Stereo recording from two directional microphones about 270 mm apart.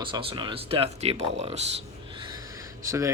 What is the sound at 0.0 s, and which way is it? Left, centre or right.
Speech, centre.